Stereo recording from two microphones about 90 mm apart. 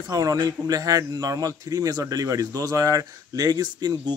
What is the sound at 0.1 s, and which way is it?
Speech, 40° right (ahead or behind).